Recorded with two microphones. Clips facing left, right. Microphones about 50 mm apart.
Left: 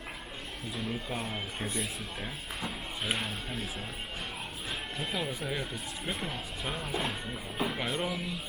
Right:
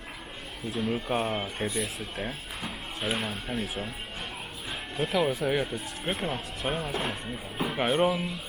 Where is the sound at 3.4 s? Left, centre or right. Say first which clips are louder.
Right 5 dB; centre.